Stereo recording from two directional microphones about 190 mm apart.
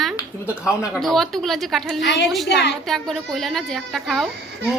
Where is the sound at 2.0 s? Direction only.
65° left (ahead or behind).